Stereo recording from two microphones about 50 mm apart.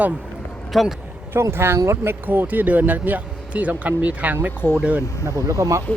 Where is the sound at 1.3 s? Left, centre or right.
Right.